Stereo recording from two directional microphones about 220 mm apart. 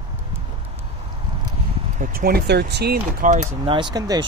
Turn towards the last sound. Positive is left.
turn(degrees=-15)  # may be behind; listen again after turning